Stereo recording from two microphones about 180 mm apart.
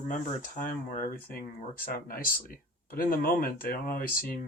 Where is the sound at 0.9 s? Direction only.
50° left (ahead or behind).